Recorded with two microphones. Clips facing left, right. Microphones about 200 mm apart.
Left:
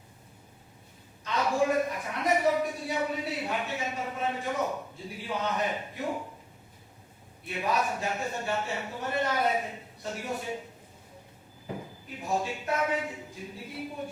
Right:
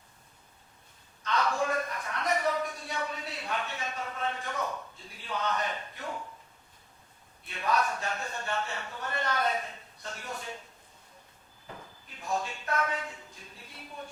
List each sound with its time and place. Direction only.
1.2 s a sound: 20° left (ahead or behind)
2.3 s a man's voice: 10° left (ahead or behind)
7.5 s speech: 10° left (ahead or behind)
11.7 s speech: 15° left (ahead or behind)